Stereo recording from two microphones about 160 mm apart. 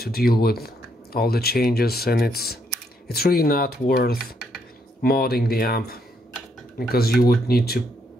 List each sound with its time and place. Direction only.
0.0 s speech: 75° left (ahead or behind)